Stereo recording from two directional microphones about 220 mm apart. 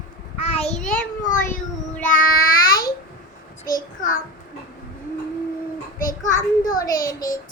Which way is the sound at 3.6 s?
40° left (ahead or behind).